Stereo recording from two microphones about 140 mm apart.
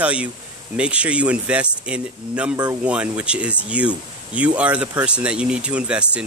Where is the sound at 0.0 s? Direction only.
10° right (ahead or behind).